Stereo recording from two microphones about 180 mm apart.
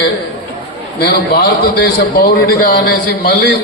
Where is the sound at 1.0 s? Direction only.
60° left (ahead or behind).